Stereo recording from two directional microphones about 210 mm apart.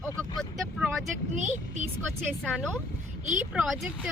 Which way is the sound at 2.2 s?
5° left (ahead or behind).